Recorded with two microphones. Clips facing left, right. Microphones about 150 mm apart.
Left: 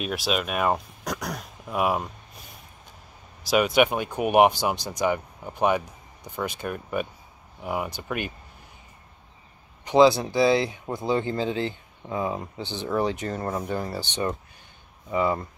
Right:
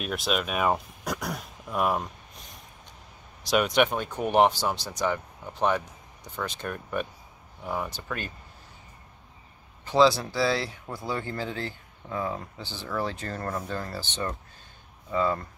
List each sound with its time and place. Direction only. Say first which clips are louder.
0.0 s speech: left 2 dB; centre (ahead or behind)
3.4 s speech: left 3 dB; 5° left (ahead or behind)
9.8 s speech: left 4 dB; 15° left (ahead or behind)